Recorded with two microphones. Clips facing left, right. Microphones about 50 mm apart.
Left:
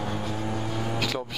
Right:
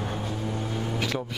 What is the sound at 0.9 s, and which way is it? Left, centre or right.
Vehicle, centre.